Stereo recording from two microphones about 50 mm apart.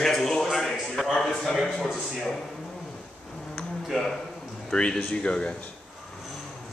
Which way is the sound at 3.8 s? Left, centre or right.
Centre.